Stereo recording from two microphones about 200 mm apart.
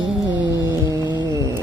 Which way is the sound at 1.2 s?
15° right (ahead or behind).